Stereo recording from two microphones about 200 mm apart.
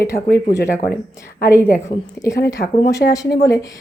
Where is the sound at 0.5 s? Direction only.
15° left (ahead or behind).